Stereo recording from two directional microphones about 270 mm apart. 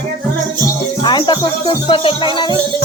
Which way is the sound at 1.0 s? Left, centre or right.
Centre.